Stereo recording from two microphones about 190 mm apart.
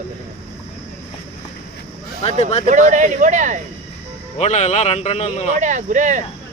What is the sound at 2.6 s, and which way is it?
Speech, 40° right (ahead or behind).